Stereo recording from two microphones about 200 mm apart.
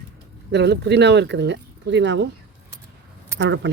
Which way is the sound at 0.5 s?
60° right (ahead or behind).